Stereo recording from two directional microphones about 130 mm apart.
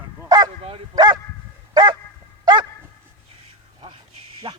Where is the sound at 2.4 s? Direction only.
35° right (ahead or behind).